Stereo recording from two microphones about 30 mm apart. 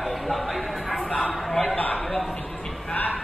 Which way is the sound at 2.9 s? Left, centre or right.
Left.